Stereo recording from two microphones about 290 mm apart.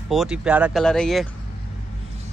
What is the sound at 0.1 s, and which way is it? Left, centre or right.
Speech, centre.